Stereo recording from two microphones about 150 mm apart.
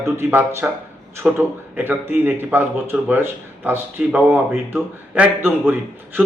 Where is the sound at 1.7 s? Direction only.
10° right (ahead or behind).